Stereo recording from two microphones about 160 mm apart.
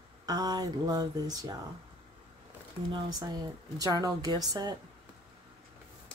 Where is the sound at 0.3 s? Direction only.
25° right (ahead or behind).